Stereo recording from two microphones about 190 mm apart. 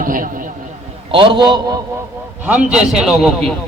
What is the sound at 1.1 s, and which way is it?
Speech, 25° right (ahead or behind).